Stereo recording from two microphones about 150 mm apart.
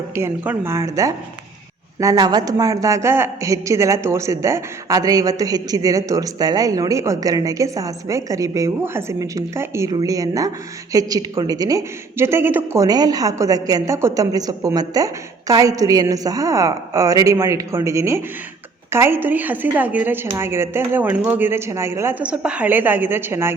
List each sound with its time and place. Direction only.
0.1 s a woman's voice: 15° right (ahead or behind)